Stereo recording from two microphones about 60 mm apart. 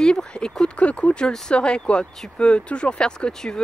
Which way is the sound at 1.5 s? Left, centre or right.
Centre.